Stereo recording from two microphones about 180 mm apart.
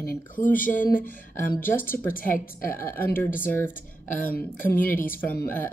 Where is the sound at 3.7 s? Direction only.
50° left (ahead or behind).